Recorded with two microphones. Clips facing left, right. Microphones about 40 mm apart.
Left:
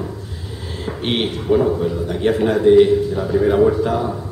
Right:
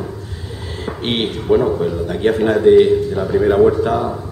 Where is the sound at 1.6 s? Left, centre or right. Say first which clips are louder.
Right 1 dB; centre.